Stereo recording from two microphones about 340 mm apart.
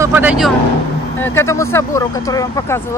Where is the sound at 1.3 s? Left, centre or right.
Centre.